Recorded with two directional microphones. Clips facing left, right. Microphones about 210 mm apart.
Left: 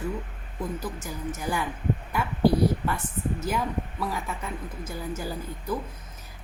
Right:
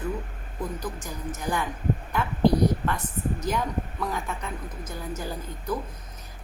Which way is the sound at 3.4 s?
5° left (ahead or behind).